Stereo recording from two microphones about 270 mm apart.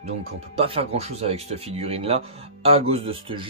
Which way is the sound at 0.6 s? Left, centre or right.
Right.